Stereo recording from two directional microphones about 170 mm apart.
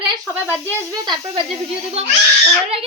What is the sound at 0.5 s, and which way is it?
Speech, 15° left (ahead or behind).